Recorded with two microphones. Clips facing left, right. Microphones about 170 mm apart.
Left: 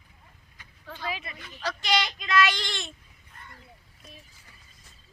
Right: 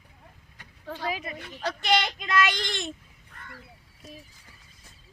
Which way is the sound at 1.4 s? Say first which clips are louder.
Right 2 dB; 65° right (ahead or behind).